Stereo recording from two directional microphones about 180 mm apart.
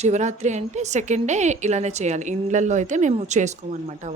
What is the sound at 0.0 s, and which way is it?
A woman's voice, 40° right (ahead or behind).